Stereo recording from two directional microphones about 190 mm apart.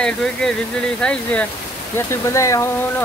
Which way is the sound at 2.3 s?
15° left (ahead or behind).